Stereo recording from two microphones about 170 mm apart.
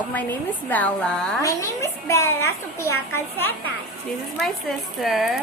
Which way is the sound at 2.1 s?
15° left (ahead or behind).